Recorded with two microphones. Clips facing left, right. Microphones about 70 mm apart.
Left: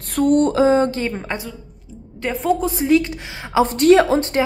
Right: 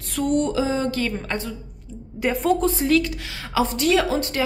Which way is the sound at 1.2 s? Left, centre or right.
Centre.